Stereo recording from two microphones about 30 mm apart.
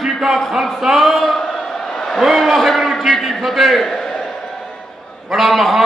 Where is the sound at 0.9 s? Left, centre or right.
Centre.